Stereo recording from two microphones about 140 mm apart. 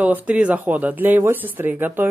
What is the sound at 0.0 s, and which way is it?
Speech, 10° right (ahead or behind).